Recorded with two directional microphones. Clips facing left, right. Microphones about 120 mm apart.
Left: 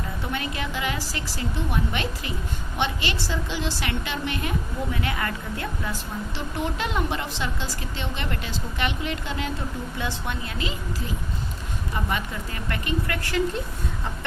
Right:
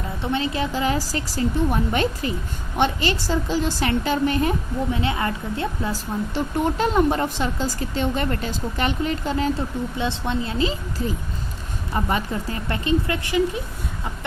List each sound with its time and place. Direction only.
0.2 s speech: 25° right (ahead or behind)
4.9 s a woman's voice: 25° right (ahead or behind)
6.3 s speech: 40° right (ahead or behind)
10.0 s a woman's voice: 25° right (ahead or behind)
12.0 s a woman's voice: 35° right (ahead or behind); by 13.6 s 15° right (ahead or behind)